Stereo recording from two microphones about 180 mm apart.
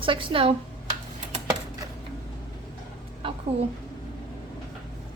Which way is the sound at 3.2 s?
30° right (ahead or behind).